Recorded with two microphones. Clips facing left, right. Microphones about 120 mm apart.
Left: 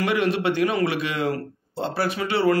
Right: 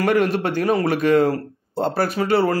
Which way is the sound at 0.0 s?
45° right (ahead or behind).